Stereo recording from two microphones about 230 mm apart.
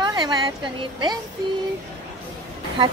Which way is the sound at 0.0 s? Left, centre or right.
Centre.